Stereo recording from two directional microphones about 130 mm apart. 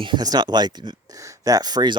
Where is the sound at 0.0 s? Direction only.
35° right (ahead or behind).